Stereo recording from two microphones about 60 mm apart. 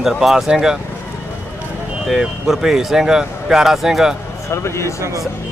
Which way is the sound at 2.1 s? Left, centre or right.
Centre.